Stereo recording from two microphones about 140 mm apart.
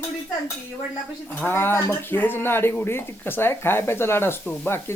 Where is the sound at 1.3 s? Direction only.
15° left (ahead or behind).